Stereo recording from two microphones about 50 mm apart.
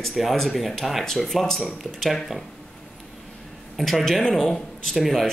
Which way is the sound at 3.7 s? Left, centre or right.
Centre.